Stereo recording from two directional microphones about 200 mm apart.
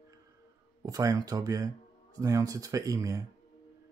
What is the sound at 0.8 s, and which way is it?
Speech, 15° right (ahead or behind).